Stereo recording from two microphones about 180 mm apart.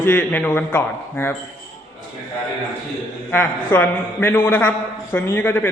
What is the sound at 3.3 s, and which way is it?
Speech, 10° left (ahead or behind).